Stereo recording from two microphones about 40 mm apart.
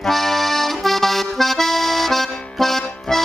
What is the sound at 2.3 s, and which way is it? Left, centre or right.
Music, left.